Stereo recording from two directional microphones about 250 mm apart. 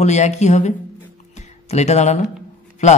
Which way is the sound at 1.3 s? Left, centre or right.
Left.